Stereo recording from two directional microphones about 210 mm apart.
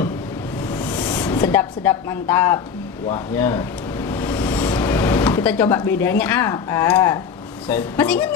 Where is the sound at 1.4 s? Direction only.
10° left (ahead or behind).